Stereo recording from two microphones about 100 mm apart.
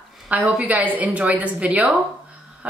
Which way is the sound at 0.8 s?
15° right (ahead or behind).